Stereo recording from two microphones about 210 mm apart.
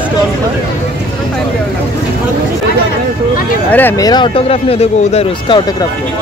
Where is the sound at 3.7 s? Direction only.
10° left (ahead or behind); by 5.6 s 25° left (ahead or behind).